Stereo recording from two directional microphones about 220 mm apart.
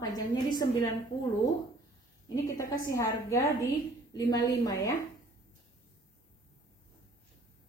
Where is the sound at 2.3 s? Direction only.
15° left (ahead or behind).